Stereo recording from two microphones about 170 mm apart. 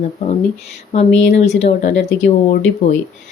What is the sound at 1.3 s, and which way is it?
Speech, 40° left (ahead or behind).